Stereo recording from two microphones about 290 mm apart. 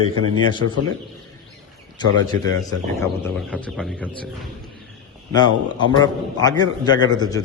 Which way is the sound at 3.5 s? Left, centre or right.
Centre.